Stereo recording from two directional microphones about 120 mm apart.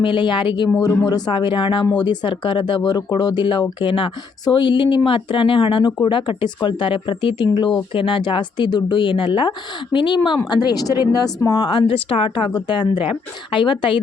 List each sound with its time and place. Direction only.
0.0 s speech: 45° left (ahead or behind)
0.7 s speech: 30° left (ahead or behind)